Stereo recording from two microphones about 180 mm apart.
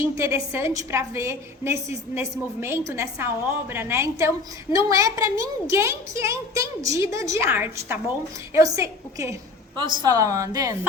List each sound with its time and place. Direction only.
0.0 s a woman's voice: 15° right (ahead or behind)